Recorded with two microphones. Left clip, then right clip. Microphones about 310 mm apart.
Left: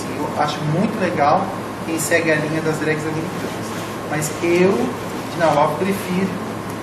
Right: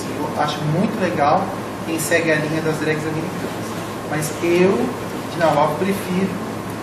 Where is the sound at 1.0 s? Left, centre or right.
Centre.